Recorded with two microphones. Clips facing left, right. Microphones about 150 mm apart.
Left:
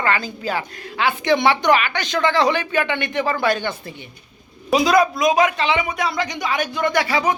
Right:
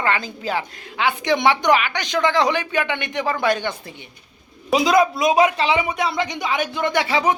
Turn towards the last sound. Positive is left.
turn(degrees=-25)  # may be behind; listen again after turning